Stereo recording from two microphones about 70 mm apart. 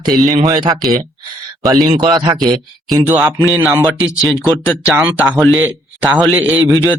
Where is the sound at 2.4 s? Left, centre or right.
Right.